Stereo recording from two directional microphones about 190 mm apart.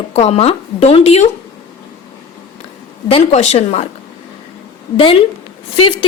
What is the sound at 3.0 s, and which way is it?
Speech, 30° left (ahead or behind).